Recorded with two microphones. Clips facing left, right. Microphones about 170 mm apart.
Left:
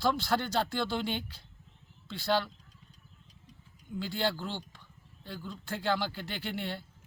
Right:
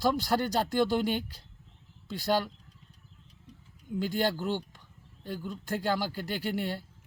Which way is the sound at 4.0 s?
45° right (ahead or behind).